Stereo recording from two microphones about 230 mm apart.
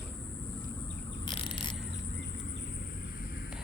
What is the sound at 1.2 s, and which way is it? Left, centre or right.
Mechanisms, left.